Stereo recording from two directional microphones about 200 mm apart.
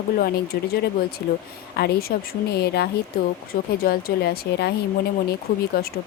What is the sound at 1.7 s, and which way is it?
Speech, 50° left (ahead or behind).